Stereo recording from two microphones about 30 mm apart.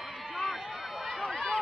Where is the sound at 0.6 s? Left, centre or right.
Centre.